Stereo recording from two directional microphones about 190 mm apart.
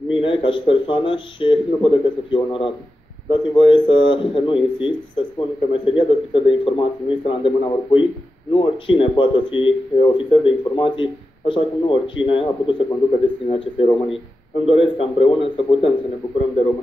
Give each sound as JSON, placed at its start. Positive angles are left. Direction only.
{"t": 0.1, "sound": "speech", "side_deg": 25}